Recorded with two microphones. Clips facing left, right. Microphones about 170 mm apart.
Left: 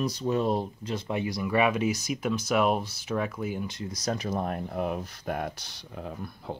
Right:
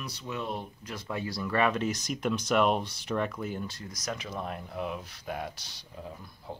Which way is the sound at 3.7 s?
25° left (ahead or behind).